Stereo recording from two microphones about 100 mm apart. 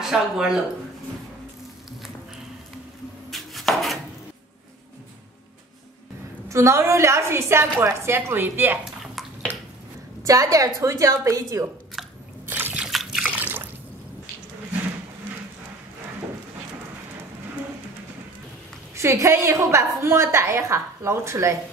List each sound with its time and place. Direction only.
0.0 s speech: 5° right (ahead or behind)
3.3 s chopping: centre (ahead or behind)
6.5 s a woman's voice: 30° right (ahead or behind)
9.0 s bathtub: centre (ahead or behind)
10.2 s a woman's voice: 35° right (ahead or behind)
12.4 s a sound: 20° right (ahead or behind)
12.7 s liquid: 5° right (ahead or behind)
13.2 s drip: 15° right (ahead or behind)
18.9 s a woman's voice: 30° right (ahead or behind)